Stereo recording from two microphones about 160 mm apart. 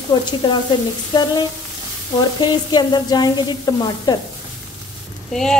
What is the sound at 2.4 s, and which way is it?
Speech, 25° left (ahead or behind).